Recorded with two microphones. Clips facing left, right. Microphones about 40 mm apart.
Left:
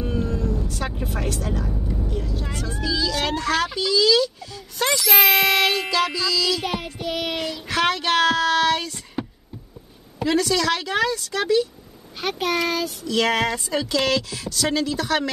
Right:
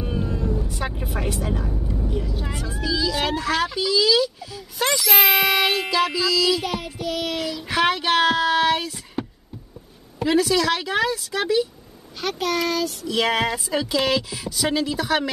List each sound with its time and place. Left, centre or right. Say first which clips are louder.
0.0 s vehicle: left 1 dB; centre
1.7 s vehicle: right 1 dB; centre
4.7 s speech: left 1 dB; centre
6.6 s child singing: even; centre
7.6 s child singing: right 1 dB; centre
10.1 s speech: right 1 dB; centre
12.2 s child singing: even; centre
13.0 s speech: left 2 dB; centre